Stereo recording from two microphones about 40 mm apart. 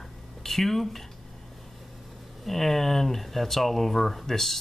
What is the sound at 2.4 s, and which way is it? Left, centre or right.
Speech, centre.